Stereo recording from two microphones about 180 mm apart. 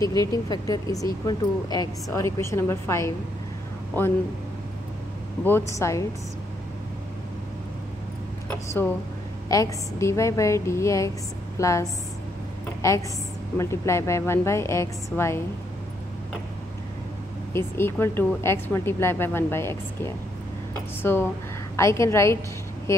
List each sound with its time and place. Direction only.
0.0 s a woman's voice: 20° left (ahead or behind)
5.4 s a woman's voice: 15° left (ahead or behind)
9.5 s a woman's voice: 15° left (ahead or behind)
17.5 s a woman's voice: 15° left (ahead or behind)
21.0 s a woman's voice: 10° left (ahead or behind)